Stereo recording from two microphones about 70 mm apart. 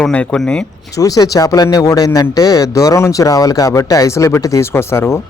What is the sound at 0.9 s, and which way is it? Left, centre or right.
Speech, left.